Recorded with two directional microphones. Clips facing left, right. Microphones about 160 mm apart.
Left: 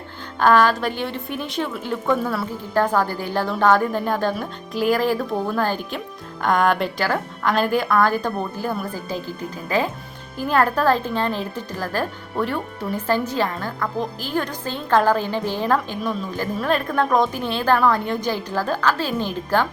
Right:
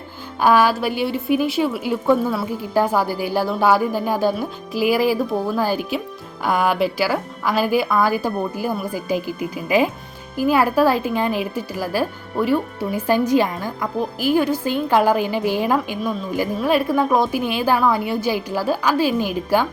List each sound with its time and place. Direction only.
0.3 s speech: 10° right (ahead or behind)